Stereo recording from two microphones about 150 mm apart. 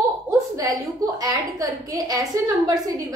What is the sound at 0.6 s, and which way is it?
A woman's voice, 25° right (ahead or behind).